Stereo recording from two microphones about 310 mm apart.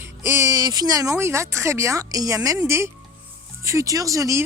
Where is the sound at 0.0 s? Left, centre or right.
Centre.